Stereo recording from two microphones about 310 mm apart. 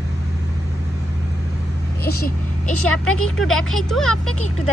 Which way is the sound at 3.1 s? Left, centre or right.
Centre.